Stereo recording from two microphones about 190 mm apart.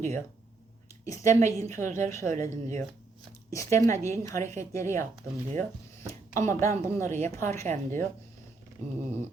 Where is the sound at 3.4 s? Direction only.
15° left (ahead or behind).